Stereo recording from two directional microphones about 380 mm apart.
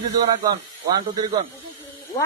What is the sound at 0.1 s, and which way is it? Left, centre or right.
A man's voice, centre.